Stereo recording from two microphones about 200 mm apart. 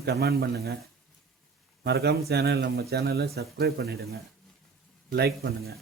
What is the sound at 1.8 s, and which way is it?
A man's voice, 55° right (ahead or behind).